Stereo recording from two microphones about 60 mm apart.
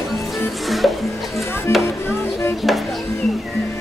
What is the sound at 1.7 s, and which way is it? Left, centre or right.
Music, left.